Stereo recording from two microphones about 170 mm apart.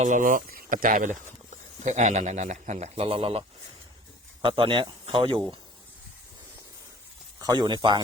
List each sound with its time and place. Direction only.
0.0 s a man's voice: 50° right (ahead or behind); by 3.4 s 35° right (ahead or behind)
4.4 s speech: 30° right (ahead or behind)
7.3 s speech: 25° right (ahead or behind)